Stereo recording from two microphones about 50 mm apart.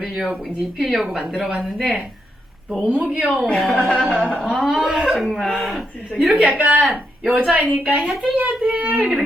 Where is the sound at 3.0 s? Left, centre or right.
Right.